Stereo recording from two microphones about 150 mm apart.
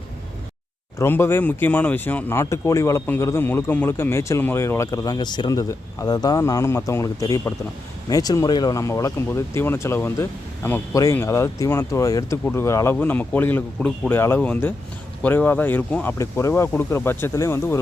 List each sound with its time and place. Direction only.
0.9 s a man's voice: 15° left (ahead or behind)
14.1 s speech: 15° left (ahead or behind)